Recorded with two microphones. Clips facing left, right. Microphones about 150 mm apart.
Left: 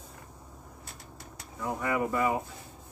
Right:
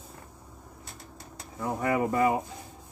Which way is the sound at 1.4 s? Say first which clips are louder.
Right 2 dB; 30° right (ahead or behind).